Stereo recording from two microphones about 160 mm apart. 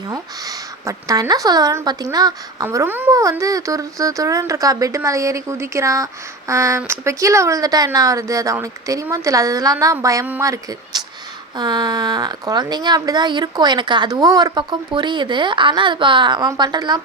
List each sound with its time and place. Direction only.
0.1 s a woman's voice: 20° right (ahead or behind)